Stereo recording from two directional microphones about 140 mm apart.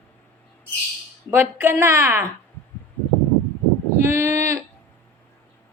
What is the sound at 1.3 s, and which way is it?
Speech, 15° right (ahead or behind).